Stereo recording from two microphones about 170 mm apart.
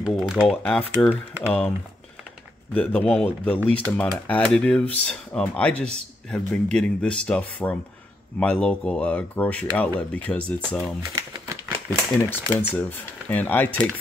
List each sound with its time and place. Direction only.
0.0 s speech: centre (ahead or behind)
2.7 s speech: 5° left (ahead or behind)
11.0 s crumpling: 20° right (ahead or behind)
12.2 s speech: 15° left (ahead or behind)